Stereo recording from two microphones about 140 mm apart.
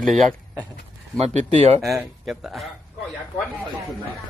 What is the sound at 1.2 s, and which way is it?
Speech, 50° right (ahead or behind).